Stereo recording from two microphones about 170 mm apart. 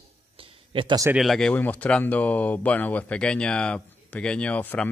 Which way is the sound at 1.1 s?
Centre (ahead or behind).